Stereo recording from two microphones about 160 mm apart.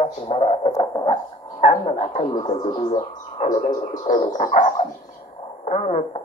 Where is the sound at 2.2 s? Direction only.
25° left (ahead or behind).